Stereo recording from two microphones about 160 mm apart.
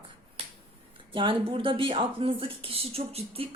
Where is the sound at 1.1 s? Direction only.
35° right (ahead or behind).